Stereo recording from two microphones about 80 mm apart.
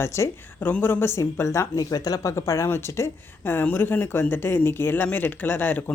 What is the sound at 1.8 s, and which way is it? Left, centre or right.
Speech, left.